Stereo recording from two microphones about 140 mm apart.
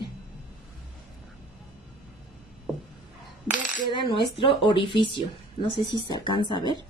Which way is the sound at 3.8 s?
35° left (ahead or behind).